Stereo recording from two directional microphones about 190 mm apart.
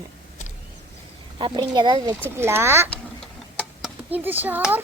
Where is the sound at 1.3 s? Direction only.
25° right (ahead or behind).